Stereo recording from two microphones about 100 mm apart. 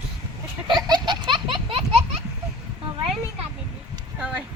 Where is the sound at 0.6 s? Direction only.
50° right (ahead or behind).